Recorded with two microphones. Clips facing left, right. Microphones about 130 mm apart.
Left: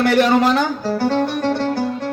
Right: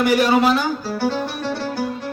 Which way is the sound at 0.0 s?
10° right (ahead or behind).